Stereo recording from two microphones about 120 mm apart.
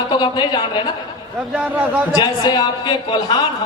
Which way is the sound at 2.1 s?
35° left (ahead or behind).